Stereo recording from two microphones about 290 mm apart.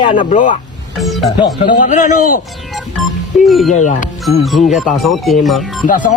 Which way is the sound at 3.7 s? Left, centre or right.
Left.